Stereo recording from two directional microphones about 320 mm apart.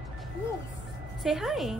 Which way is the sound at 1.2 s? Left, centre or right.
Centre.